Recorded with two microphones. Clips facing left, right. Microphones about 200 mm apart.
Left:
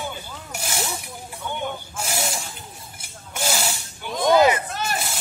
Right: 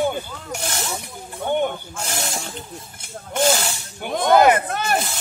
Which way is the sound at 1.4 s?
55° right (ahead or behind).